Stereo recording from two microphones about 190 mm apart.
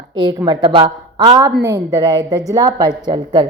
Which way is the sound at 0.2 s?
20° right (ahead or behind).